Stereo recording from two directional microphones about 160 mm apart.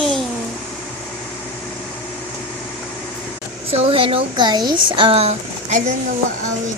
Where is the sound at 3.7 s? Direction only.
35° right (ahead or behind).